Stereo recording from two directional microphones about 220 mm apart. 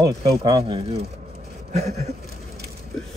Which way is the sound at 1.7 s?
30° right (ahead or behind).